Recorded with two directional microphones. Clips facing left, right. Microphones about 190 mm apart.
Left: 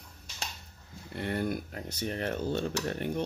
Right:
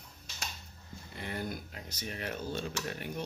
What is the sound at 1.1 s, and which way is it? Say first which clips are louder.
Speech: left 7 dB; 60° left (ahead or behind).